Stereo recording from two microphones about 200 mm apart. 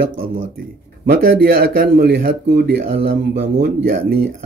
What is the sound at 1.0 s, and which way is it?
Speech, 50° right (ahead or behind).